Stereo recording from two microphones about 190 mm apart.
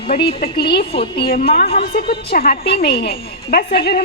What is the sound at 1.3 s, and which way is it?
A woman's voice, 55° left (ahead or behind).